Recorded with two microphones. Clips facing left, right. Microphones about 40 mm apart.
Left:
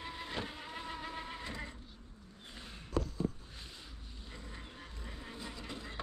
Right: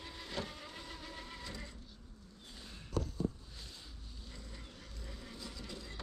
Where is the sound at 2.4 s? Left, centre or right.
Left.